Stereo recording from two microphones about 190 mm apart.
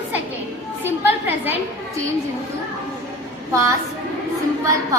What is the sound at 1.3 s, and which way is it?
Speech, 10° right (ahead or behind).